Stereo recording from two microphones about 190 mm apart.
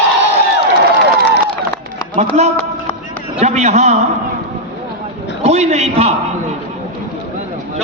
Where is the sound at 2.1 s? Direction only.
35° right (ahead or behind).